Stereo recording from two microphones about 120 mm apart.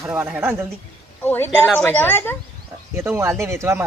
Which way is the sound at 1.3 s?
15° left (ahead or behind).